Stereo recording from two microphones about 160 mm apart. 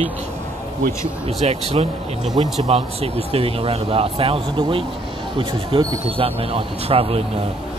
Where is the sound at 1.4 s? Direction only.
40° right (ahead or behind).